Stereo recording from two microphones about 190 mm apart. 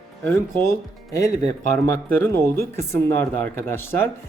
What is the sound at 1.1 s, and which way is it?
Speech, 15° left (ahead or behind).